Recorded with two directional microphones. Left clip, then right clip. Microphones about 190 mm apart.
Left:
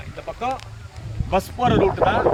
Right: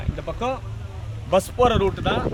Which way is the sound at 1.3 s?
25° right (ahead or behind).